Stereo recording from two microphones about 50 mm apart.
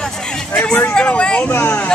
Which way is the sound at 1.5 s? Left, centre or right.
Left.